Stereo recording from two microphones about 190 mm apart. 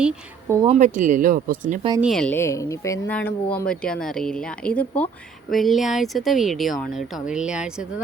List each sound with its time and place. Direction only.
0.7 s speech: 40° right (ahead or behind)
2.0 s a woman's voice: centre (ahead or behind)